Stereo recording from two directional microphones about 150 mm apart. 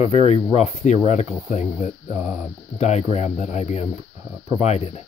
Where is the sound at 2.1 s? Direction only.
10° right (ahead or behind).